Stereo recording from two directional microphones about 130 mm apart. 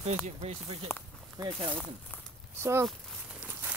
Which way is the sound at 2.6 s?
20° right (ahead or behind).